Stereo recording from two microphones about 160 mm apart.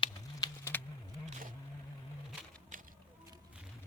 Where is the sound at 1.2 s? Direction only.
50° right (ahead or behind).